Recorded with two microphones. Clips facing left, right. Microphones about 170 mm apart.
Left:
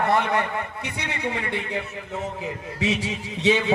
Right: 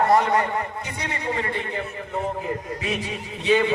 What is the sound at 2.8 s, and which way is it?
Speech, 90° left.